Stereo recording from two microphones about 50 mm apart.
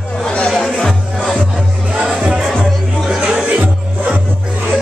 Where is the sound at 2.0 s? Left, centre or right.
Centre.